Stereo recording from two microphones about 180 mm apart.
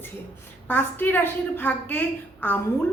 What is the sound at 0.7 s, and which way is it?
A woman's voice, 10° left (ahead or behind).